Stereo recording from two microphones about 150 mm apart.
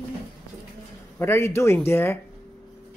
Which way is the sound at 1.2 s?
15° left (ahead or behind).